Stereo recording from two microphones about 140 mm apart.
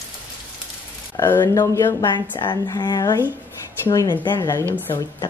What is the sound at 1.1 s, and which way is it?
A woman's voice, 20° left (ahead or behind).